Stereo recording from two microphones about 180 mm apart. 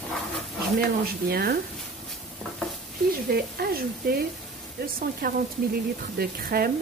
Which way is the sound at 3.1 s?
55° right (ahead or behind).